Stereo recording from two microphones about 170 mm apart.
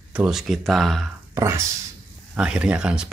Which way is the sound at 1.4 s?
15° right (ahead or behind).